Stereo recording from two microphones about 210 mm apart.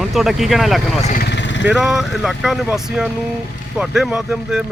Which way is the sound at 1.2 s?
55° left (ahead or behind).